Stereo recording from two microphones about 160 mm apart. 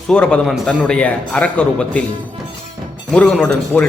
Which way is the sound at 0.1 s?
5° left (ahead or behind).